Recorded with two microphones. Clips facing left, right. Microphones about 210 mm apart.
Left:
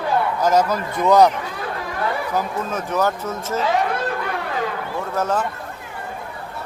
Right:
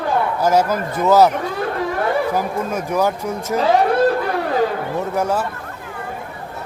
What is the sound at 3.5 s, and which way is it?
Speech, 35° right (ahead or behind).